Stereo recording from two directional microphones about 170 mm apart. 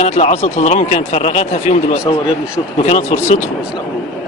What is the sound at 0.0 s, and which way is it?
Speech, 40° left (ahead or behind).